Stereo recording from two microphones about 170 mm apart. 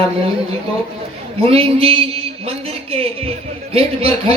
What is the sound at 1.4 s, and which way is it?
Speech, 35° right (ahead or behind).